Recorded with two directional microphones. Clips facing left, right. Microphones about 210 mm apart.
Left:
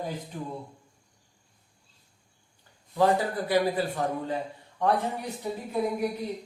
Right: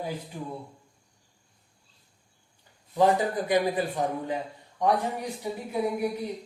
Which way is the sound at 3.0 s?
20° right (ahead or behind).